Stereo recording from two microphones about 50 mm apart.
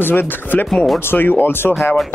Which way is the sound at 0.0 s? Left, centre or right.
Left.